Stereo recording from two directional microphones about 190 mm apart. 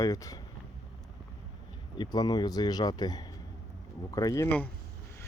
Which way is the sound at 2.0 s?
20° left (ahead or behind).